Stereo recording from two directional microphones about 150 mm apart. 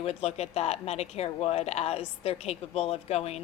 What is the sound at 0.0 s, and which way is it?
Speech, 45° left (ahead or behind).